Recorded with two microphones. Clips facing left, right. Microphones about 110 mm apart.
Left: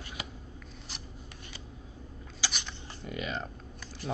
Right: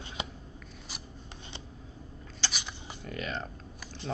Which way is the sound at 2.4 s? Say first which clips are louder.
Even; centre (ahead or behind).